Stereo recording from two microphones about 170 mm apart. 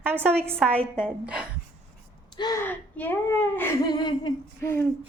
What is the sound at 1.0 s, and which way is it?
Speech, 5° right (ahead or behind).